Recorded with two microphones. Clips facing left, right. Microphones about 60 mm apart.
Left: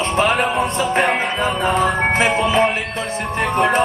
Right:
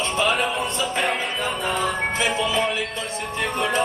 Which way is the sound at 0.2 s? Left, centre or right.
Left.